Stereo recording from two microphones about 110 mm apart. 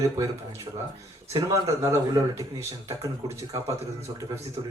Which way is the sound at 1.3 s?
30° right (ahead or behind).